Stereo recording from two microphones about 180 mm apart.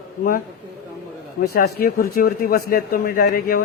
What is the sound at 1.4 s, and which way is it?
A man's voice, 60° left (ahead or behind).